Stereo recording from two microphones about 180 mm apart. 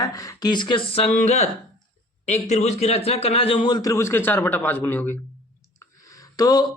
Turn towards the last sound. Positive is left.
turn(degrees=20)  # may be behind; listen again after turning